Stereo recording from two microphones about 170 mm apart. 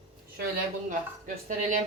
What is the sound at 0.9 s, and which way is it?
Speech, 50° right (ahead or behind).